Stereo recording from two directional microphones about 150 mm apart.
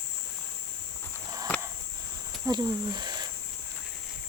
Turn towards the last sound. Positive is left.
turn(degrees=-30)  # may be behind; listen again after turning